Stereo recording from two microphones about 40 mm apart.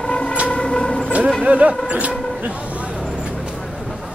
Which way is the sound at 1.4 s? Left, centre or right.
Right.